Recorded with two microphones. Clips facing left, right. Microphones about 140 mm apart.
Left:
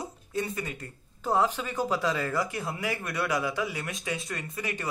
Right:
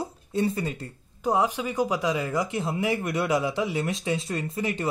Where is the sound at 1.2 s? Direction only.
15° right (ahead or behind).